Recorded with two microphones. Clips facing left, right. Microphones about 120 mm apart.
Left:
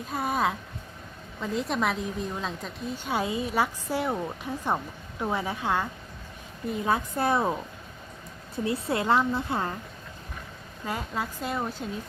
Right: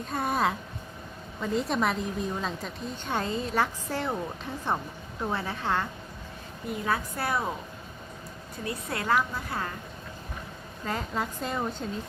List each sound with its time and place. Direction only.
0.1 s a woman's voice: centre (ahead or behind)
6.8 s a woman's voice: 20° left (ahead or behind)
8.5 s a woman's voice: 25° left (ahead or behind)
10.8 s a woman's voice: 10° left (ahead or behind)